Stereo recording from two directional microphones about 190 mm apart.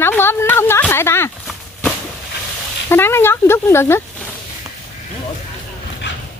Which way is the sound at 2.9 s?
10° left (ahead or behind).